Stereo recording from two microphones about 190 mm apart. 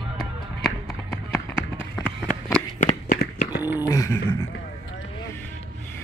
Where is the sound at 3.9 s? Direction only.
15° left (ahead or behind).